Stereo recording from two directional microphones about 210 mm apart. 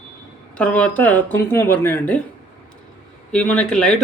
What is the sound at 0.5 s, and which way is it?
Speech, 5° left (ahead or behind).